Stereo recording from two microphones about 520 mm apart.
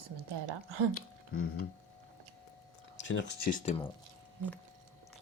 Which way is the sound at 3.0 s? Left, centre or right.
Left.